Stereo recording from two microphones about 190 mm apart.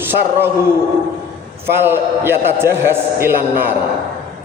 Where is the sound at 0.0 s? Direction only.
10° right (ahead or behind).